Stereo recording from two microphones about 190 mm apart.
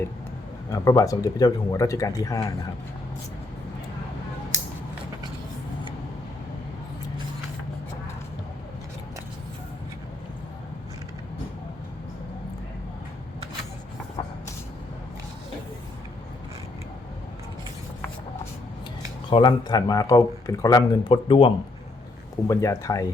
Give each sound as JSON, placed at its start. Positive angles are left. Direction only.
{"t": 0.7, "sound": "speech", "side_deg": 15}
{"t": 19.3, "sound": "speech", "side_deg": 25}
{"t": 22.4, "sound": "speech", "side_deg": 15}